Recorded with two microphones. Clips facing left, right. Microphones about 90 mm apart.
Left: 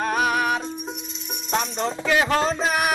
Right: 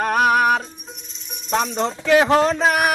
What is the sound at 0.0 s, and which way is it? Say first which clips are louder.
Music: right 5 dB; 60° right (ahead or behind).